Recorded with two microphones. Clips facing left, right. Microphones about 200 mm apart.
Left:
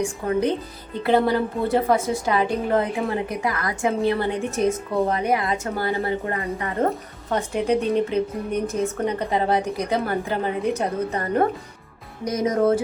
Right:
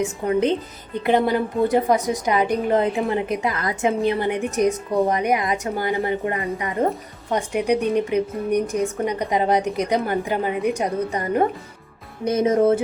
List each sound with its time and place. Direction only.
0.0 s a woman's voice: 20° right (ahead or behind)
12.2 s speech: 25° right (ahead or behind)